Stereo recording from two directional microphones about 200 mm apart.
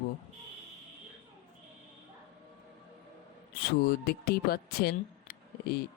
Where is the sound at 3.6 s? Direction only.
50° left (ahead or behind).